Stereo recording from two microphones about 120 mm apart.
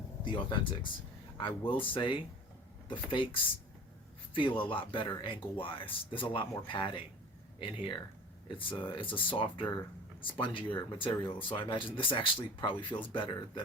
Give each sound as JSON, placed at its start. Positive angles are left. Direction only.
{"t": 0.3, "sound": "speech", "side_deg": 40}
{"t": 4.6, "sound": "speech", "side_deg": 45}